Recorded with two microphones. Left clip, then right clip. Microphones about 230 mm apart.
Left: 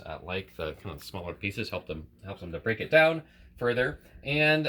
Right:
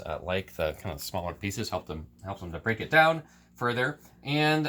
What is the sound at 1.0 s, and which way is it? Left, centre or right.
Speech, right.